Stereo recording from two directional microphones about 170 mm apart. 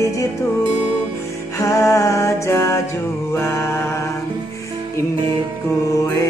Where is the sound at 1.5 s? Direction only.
15° left (ahead or behind).